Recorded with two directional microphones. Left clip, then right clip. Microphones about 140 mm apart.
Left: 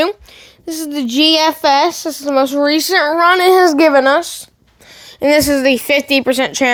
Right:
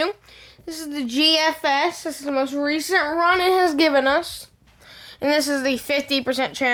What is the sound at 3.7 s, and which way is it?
Speech, 35° left (ahead or behind).